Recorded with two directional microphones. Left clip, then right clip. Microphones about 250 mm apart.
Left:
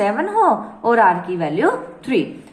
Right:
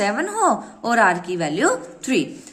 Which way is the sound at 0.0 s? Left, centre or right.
Right.